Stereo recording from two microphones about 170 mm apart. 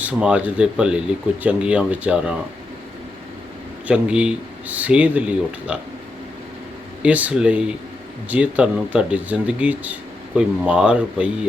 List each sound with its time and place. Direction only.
0.0 s speech: 5° right (ahead or behind)
3.8 s speech: 5° right (ahead or behind)
7.0 s speech: 10° right (ahead or behind)